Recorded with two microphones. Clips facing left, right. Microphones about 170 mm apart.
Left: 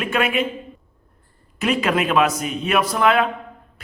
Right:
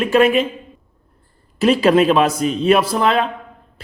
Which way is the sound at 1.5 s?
30° right (ahead or behind).